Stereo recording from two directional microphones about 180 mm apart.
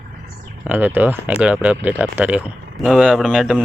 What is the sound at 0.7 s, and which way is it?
Speech, 10° right (ahead or behind).